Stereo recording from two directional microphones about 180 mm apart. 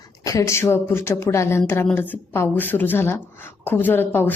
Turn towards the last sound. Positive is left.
turn(degrees=10)  # may be behind; listen again after turning